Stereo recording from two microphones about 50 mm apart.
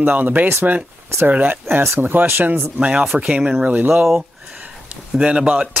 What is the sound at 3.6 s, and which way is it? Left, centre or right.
Speech, right.